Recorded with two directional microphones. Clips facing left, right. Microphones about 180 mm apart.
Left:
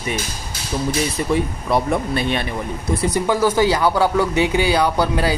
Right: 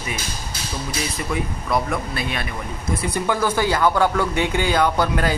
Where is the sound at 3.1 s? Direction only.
15° left (ahead or behind).